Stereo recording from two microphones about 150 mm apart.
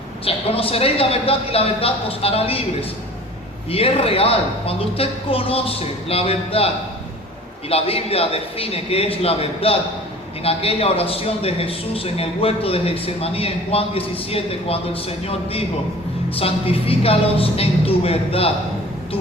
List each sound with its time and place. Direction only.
0.3 s speech: 40° left (ahead or behind)
3.7 s speech: 40° left (ahead or behind)
7.7 s speech: 40° left (ahead or behind)
16.3 s speech: 40° left (ahead or behind)